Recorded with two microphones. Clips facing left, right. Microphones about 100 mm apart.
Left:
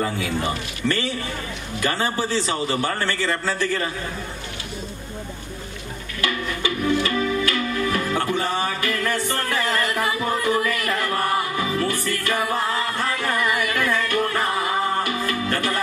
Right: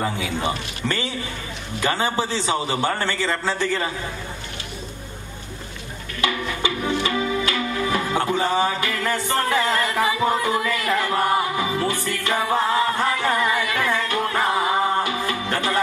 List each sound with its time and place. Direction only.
0.0 s a man's voice: 20° right (ahead or behind)
6.2 s music: 25° right (ahead or behind)